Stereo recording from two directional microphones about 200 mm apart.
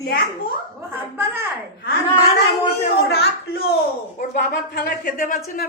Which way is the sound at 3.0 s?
50° left (ahead or behind).